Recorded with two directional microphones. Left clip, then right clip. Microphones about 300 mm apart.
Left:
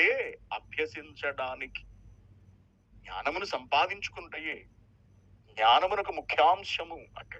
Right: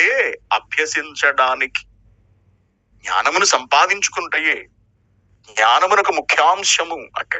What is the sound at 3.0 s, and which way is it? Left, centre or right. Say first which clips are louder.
A man's voice: right 18 dB; right.